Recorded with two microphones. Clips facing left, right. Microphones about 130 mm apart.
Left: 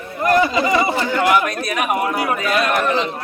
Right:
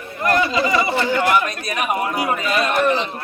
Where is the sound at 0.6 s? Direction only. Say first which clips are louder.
Left 1 dB; 35° left (ahead or behind).